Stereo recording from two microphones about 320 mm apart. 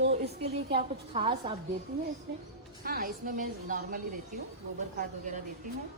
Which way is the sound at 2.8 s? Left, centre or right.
Right.